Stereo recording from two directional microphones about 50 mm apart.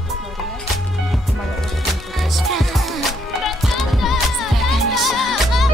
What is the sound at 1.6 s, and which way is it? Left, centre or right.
Music, centre.